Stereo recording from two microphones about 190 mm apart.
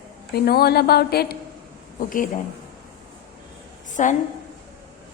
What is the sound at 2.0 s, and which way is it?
Speech, 45° left (ahead or behind).